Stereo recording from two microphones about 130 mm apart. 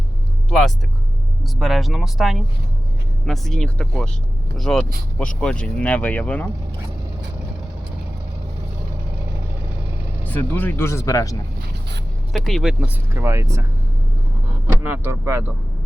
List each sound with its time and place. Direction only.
1.5 s speech: centre (ahead or behind)
10.2 s speech: 15° left (ahead or behind)
12.3 s speech: centre (ahead or behind)
12.8 s speech: 20° right (ahead or behind)
14.8 s speech: 15° right (ahead or behind)